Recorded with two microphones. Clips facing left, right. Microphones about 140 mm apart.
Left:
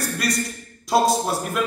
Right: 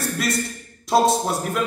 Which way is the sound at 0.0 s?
Centre (ahead or behind).